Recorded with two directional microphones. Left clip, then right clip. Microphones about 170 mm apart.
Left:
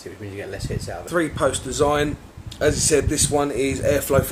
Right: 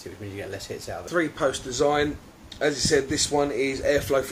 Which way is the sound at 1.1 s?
30° left (ahead or behind).